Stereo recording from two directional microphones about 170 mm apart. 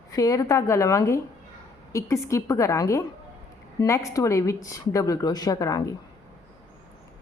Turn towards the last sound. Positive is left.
turn(degrees=20)  # may be behind; listen again after turning